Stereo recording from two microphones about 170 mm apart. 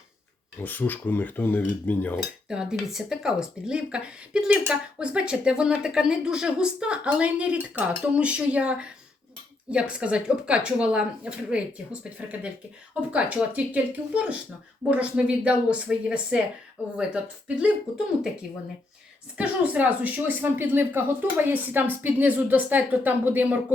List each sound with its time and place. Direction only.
0.6 s cutlery: 10° left (ahead or behind)
2.5 s speech: 5° right (ahead or behind)
9.9 s speech: 5° right (ahead or behind)
17.6 s speech: 5° right (ahead or behind)
19.4 s speech: 10° right (ahead or behind)